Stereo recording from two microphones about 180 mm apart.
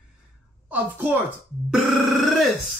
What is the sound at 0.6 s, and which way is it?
A woman's voice, 10° right (ahead or behind).